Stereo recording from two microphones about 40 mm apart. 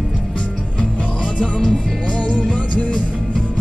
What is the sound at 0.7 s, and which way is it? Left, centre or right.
Music, left.